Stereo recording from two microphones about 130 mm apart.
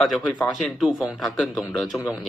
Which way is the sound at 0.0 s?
Centre (ahead or behind).